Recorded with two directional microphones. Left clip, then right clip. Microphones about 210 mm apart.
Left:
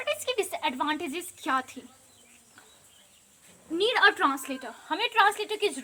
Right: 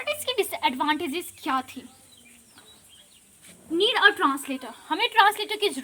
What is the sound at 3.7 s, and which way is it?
A woman's voice, 10° right (ahead or behind).